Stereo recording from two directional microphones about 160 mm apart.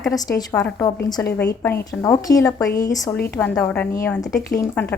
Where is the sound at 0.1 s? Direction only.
20° left (ahead or behind).